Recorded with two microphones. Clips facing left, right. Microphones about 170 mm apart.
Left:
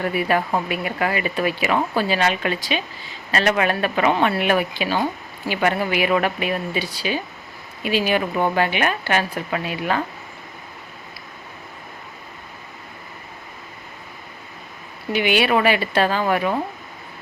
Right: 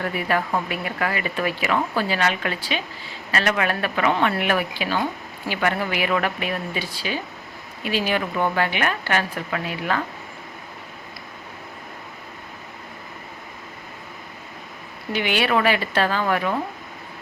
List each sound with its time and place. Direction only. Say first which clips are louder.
0.0 s speech: left 3 dB; 20° left (ahead or behind)
15.1 s speech: left 3 dB; 15° left (ahead or behind)